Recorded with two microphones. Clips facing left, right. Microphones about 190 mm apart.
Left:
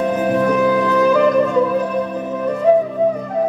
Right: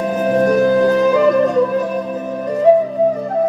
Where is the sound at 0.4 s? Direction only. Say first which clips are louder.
Right 5 dB; 40° right (ahead or behind).